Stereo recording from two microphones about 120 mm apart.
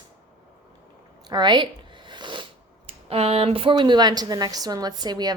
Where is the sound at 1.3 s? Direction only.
35° right (ahead or behind).